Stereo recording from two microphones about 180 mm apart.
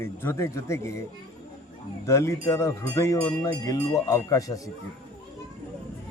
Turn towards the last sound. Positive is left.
turn(degrees=20)  # may be behind; listen again after turning